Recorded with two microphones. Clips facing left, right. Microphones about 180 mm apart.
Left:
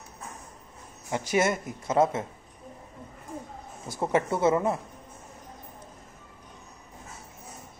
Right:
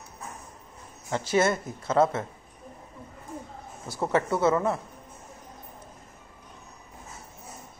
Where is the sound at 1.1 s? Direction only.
15° left (ahead or behind).